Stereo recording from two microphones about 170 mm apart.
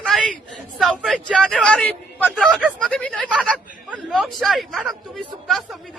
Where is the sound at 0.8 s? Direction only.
Centre (ahead or behind).